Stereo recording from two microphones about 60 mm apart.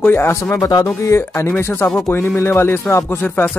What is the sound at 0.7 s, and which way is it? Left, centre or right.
Speech, left.